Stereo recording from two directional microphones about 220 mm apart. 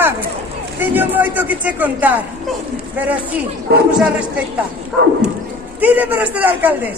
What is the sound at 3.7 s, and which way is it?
Speech, 45° right (ahead or behind).